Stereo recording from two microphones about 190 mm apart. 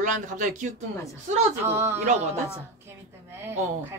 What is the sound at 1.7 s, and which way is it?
Speech, 10° right (ahead or behind).